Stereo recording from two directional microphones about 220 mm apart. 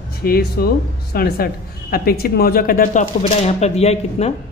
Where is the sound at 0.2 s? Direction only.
45° left (ahead or behind).